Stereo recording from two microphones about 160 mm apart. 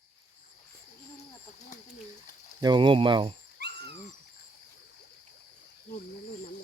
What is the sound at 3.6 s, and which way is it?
Dog, 90° right.